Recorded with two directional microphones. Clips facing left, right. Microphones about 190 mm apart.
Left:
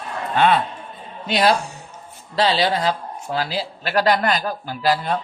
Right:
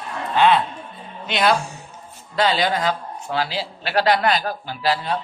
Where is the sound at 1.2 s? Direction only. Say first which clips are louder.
Left 1 dB; 35° left (ahead or behind).